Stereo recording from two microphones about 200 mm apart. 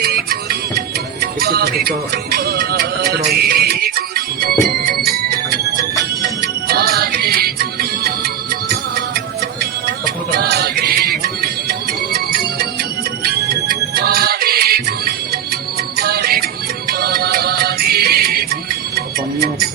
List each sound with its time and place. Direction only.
0.0 s music: 50° right (ahead or behind)
6.7 s music: 50° right (ahead or behind)
10.3 s music: 55° right (ahead or behind)